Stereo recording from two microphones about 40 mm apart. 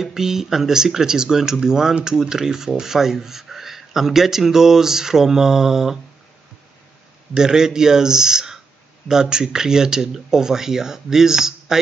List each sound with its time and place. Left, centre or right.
0.0 s speech: centre
7.3 s speech: centre